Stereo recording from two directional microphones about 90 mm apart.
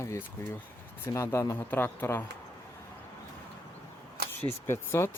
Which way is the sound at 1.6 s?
20° left (ahead or behind).